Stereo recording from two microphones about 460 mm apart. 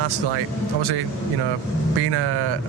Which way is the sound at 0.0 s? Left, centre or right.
Right.